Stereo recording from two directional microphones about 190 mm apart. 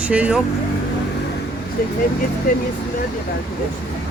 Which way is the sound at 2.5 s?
45° left (ahead or behind).